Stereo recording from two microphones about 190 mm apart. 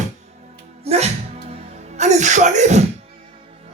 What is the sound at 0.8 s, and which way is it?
Music, 35° right (ahead or behind).